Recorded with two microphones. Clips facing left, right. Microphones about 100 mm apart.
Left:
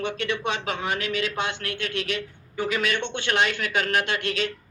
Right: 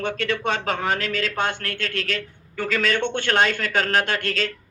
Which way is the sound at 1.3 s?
50° right (ahead or behind).